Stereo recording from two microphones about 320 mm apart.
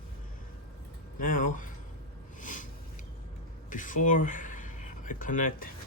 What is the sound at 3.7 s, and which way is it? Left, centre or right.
Speech, left.